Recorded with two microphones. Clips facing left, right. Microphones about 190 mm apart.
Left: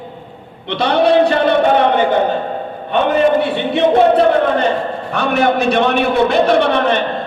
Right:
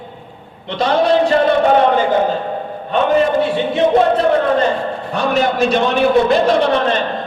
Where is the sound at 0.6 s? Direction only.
65° left (ahead or behind).